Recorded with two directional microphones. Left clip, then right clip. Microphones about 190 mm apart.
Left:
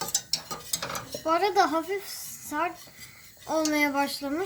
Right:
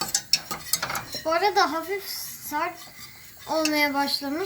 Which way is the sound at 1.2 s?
20° left (ahead or behind).